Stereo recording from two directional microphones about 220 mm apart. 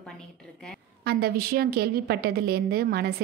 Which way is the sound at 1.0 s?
45° right (ahead or behind).